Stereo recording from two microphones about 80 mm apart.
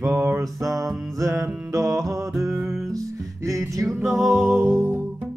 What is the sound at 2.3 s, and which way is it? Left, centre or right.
Music, centre.